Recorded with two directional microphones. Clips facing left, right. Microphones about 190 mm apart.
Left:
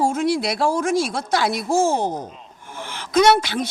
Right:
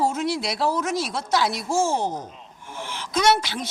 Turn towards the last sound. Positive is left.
turn(degrees=55)  # may be behind; listen again after turning